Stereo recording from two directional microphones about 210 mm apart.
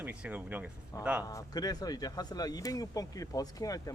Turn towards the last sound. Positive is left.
turn(degrees=15)  # may be behind; listen again after turning